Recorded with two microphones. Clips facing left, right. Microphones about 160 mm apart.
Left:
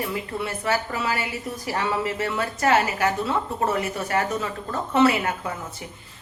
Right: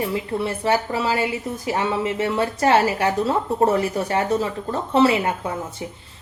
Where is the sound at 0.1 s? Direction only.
30° right (ahead or behind).